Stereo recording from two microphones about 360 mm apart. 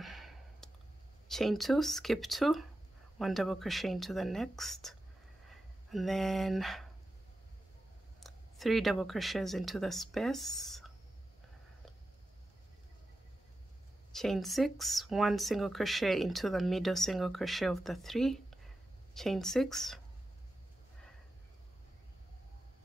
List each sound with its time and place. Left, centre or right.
0.0 s a sound: centre
1.3 s speech: centre
8.2 s speech: centre
14.1 s speech: centre